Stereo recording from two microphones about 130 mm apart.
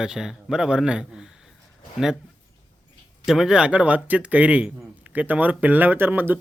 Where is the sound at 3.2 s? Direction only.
5° right (ahead or behind).